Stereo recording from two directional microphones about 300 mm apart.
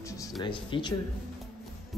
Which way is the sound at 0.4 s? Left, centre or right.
Centre.